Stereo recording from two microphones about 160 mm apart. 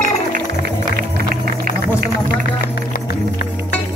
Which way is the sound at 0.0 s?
70° right (ahead or behind).